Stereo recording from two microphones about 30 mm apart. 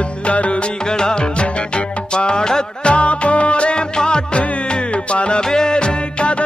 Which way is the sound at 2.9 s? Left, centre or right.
Left.